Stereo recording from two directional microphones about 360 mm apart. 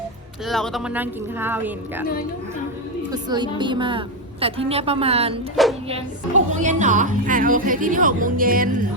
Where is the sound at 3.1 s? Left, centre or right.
Centre.